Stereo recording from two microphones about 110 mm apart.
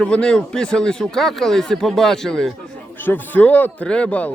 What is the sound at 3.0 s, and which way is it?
Speech, 15° left (ahead or behind).